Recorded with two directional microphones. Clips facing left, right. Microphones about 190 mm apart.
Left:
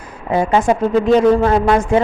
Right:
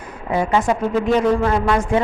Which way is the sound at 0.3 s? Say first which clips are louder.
Left 3 dB; 30° left (ahead or behind).